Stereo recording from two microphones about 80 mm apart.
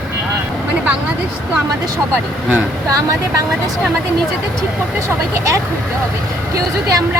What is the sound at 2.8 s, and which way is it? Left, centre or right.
Speech, right.